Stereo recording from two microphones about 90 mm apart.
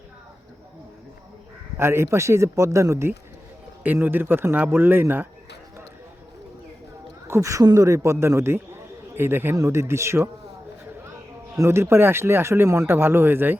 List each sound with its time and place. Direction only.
1.8 s a man's voice: 30° right (ahead or behind)
7.3 s a man's voice: 35° right (ahead or behind)
11.5 s speech: 30° right (ahead or behind)